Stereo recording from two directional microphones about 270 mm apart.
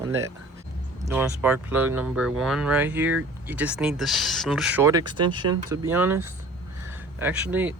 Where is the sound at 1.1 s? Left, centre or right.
Centre.